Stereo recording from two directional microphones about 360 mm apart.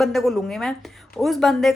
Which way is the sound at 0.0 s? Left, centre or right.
Centre.